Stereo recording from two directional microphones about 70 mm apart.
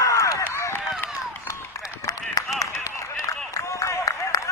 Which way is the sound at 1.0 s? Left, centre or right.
Left.